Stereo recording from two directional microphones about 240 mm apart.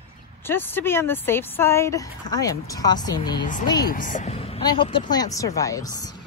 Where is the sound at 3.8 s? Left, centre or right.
Left; by 6.2 s centre.